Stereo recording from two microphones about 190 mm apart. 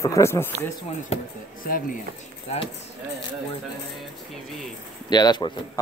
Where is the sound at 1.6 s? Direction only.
45° left (ahead or behind).